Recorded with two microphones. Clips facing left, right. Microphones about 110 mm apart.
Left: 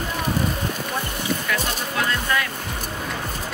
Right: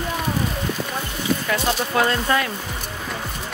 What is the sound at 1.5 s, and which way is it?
Music, 35° right (ahead or behind).